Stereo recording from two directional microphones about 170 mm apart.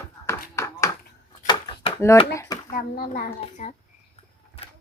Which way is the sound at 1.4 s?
30° left (ahead or behind).